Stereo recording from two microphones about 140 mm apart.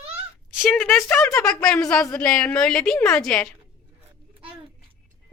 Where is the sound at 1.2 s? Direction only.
20° left (ahead or behind).